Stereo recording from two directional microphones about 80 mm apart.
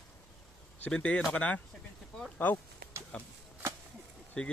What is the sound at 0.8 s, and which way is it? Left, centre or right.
Speech, centre.